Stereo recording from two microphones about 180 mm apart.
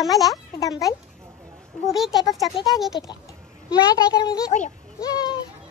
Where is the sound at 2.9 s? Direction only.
25° left (ahead or behind).